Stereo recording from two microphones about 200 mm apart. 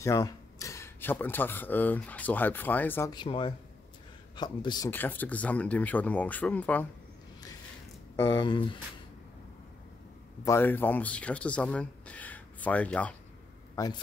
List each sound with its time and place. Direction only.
0.0 s speech: 15° left (ahead or behind)
3.1 s speech: 25° left (ahead or behind); by 6.9 s 10° left (ahead or behind)
8.2 s speech: 25° left (ahead or behind)
10.4 s speech: 10° left (ahead or behind)
13.7 s speech: 20° left (ahead or behind)